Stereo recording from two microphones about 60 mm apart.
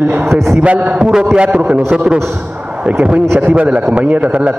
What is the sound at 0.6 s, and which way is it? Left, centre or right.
A man's voice, right.